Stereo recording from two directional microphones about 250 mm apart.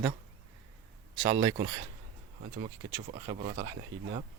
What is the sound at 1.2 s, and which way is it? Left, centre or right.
Speech, centre.